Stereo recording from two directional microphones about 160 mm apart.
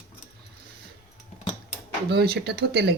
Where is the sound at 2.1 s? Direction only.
90° right.